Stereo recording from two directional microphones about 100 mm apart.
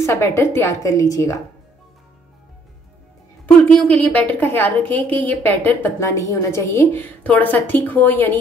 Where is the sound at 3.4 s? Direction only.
10° left (ahead or behind).